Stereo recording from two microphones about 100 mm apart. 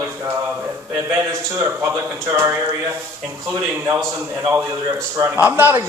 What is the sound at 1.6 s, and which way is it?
Speech, 25° right (ahead or behind).